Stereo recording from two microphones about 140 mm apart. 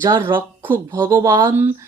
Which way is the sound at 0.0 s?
20° right (ahead or behind).